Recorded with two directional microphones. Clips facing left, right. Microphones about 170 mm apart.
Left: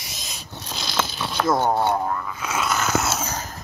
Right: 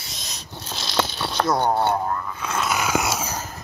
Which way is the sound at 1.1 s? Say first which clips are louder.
Left 3 dB; centre (ahead or behind).